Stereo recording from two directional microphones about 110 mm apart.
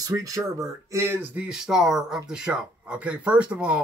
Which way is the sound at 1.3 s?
10° right (ahead or behind).